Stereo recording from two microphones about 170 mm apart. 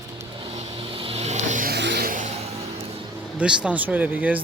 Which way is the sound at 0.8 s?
30° right (ahead or behind).